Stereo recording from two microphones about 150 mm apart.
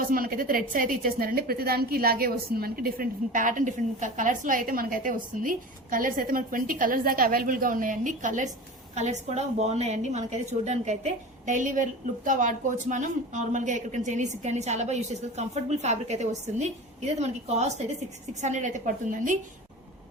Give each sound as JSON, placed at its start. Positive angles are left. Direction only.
{"t": 0.1, "sound": "a woman's voice", "side_deg": -70}